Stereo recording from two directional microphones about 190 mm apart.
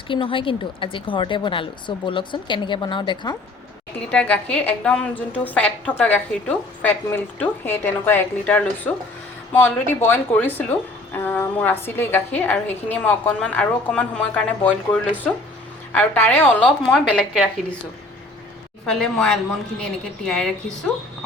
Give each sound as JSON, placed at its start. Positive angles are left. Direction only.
{"t": 0.1, "sound": "speech", "side_deg": 25}
{"t": 4.1, "sound": "a woman's voice", "side_deg": 5}
{"t": 15.9, "sound": "a woman's voice", "side_deg": 10}
{"t": 18.9, "sound": "a woman's voice", "side_deg": 5}